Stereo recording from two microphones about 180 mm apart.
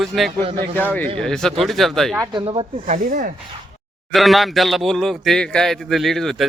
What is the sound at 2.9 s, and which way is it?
Rub, 45° right (ahead or behind).